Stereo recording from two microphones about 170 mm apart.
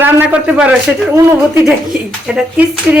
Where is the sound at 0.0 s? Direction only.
10° right (ahead or behind).